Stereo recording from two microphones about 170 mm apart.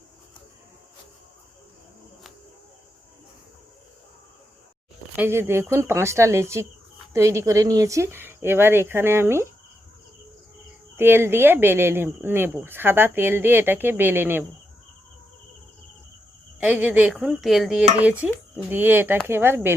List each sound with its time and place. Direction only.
5.1 s speech: 15° right (ahead or behind)
10.9 s speech: 15° right (ahead or behind)
16.6 s speech: 10° right (ahead or behind)